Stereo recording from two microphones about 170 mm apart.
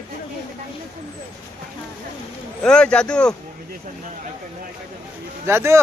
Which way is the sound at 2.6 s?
5° left (ahead or behind).